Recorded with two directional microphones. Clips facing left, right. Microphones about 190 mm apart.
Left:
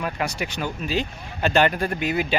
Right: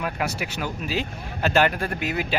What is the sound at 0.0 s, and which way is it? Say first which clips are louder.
Speech: left 1 dB; 5° right (ahead or behind).